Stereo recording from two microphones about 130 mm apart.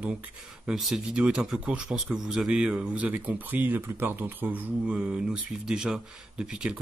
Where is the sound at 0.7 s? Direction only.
5° right (ahead or behind).